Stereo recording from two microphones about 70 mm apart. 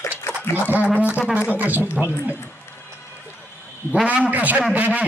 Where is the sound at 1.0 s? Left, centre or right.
Right.